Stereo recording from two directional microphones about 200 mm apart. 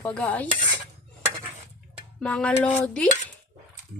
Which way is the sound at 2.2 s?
5° left (ahead or behind).